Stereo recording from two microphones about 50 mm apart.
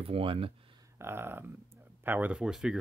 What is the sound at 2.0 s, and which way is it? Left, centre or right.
Speech, right.